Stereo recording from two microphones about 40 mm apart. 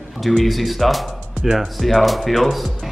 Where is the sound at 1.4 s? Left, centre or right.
Centre.